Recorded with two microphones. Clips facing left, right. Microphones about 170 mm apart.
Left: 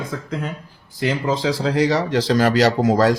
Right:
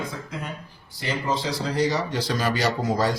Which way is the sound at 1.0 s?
90° left.